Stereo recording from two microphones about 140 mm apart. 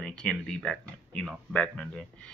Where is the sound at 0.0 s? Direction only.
5° left (ahead or behind).